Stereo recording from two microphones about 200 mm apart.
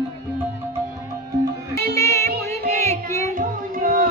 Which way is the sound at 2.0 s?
15° left (ahead or behind).